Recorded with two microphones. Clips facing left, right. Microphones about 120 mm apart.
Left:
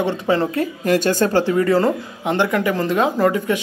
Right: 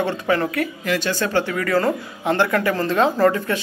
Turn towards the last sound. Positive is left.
turn(degrees=15)  # may be behind; listen again after turning